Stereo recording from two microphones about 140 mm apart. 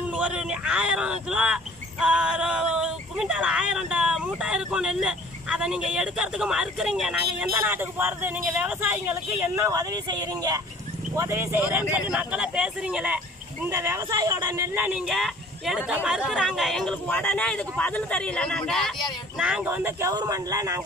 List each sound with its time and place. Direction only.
0.1 s speech: 10° right (ahead or behind)
13.7 s speech: 20° right (ahead or behind); by 16.9 s centre (ahead or behind)
17.1 s speech: 10° left (ahead or behind)
19.4 s speech: 10° right (ahead or behind)